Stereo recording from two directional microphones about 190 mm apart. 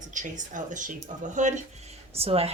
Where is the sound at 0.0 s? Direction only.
40° right (ahead or behind).